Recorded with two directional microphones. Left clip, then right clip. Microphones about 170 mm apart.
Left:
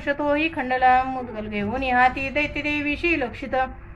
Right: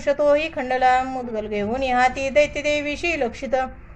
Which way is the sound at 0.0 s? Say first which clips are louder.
Right 4 dB; 45° right (ahead or behind).